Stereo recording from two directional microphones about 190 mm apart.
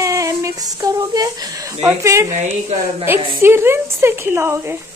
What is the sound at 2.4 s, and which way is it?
Speech, 35° right (ahead or behind).